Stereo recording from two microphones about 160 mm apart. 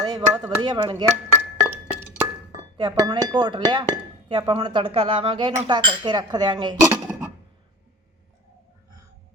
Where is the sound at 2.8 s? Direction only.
30° right (ahead or behind).